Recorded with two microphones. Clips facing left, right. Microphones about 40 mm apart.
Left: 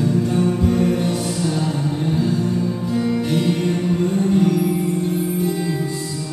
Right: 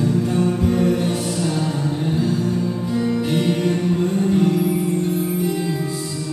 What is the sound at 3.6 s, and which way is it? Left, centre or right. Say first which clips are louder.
Music: even; centre.